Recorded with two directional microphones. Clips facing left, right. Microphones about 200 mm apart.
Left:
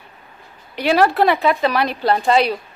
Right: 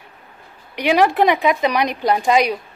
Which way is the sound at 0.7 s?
15° right (ahead or behind).